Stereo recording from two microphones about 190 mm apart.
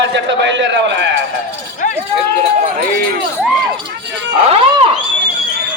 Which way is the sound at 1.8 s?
45° left (ahead or behind).